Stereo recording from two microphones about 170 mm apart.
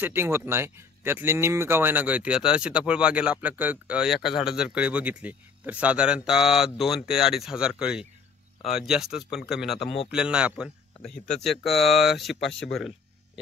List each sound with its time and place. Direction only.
0.0 s speech: 15° right (ahead or behind)
9.8 s speech: 35° left (ahead or behind)
10.1 s speech: 5° right (ahead or behind)